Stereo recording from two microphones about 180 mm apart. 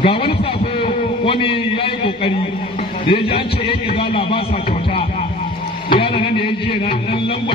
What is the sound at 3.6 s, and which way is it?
Speech, 30° left (ahead or behind).